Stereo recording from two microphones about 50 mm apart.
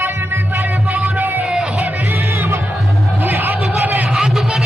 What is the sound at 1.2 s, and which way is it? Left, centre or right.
Music, right.